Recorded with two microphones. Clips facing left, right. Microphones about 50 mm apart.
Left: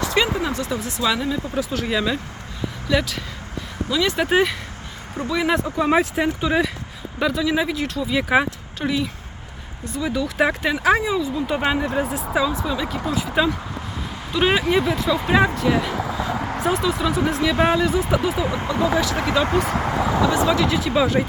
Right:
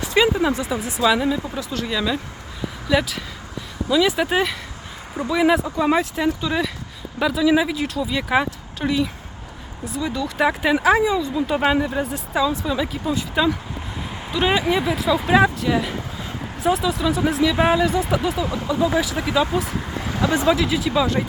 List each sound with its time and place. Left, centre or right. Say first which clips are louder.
0.0 s speech: right 3 dB; centre
1.5 s speech: left 2 dB; centre
2.9 s speech: right 1 dB; centre
4.3 s speech: left 2 dB; centre
5.1 s speech: right 3 dB; centre
6.1 s speech: left 1 dB; centre
7.2 s speech: right 3 dB; centre
13.1 s speech: even; centre
16.4 s a sound: left 6 dB; left
16.6 s speech: right 2 dB; centre
19.5 s speech: left 4 dB; left
20.5 s speech: even; centre